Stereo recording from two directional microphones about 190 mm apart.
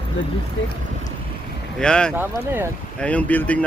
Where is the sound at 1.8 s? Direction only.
5° left (ahead or behind).